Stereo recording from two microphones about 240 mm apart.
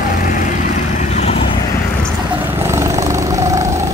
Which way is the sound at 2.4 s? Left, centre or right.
Centre.